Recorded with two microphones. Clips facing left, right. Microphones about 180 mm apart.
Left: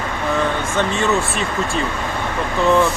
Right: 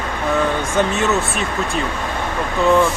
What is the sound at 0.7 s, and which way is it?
A man's voice, 5° right (ahead or behind).